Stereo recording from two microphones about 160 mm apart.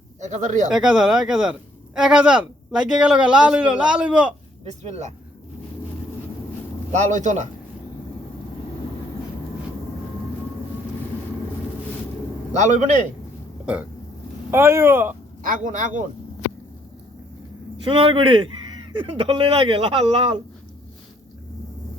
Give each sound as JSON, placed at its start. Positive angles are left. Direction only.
{"t": 0.2, "sound": "a man's voice", "side_deg": -50}
{"t": 0.7, "sound": "a man's voice", "side_deg": -5}
{"t": 4.6, "sound": "a man's voice", "side_deg": -45}
{"t": 6.9, "sound": "a man's voice", "side_deg": -50}
{"t": 12.5, "sound": "a man's voice", "side_deg": -50}
{"t": 14.5, "sound": "a man's voice", "side_deg": -15}
{"t": 15.4, "sound": "a man's voice", "side_deg": -55}
{"t": 17.8, "sound": "speech", "side_deg": -30}